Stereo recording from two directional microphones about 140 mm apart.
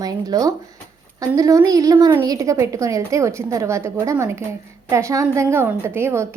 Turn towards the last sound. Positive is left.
turn(degrees=-20)  # may be behind; listen again after turning